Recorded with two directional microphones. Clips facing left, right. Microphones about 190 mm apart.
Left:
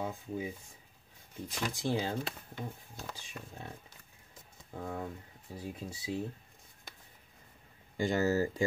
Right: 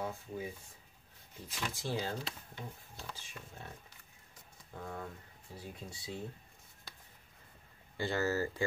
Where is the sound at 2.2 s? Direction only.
50° left (ahead or behind).